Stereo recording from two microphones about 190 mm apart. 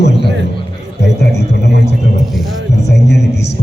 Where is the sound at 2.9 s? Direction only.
60° left (ahead or behind).